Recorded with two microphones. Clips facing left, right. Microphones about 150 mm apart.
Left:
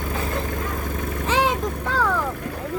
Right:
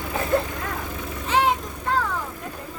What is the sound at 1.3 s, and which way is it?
Vehicle, 90° left.